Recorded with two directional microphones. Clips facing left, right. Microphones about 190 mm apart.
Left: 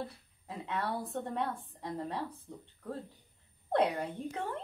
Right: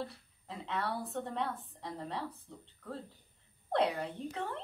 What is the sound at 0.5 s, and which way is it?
A woman's voice, 15° left (ahead or behind).